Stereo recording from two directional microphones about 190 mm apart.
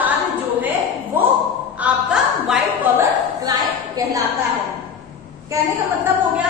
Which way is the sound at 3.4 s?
20° right (ahead or behind).